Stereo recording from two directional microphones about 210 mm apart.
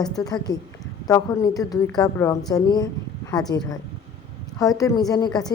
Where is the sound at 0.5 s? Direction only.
20° left (ahead or behind).